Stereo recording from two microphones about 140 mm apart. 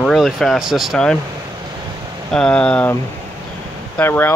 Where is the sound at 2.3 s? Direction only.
5° left (ahead or behind).